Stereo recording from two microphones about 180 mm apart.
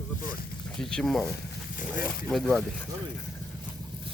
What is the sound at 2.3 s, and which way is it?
Speech, centre (ahead or behind).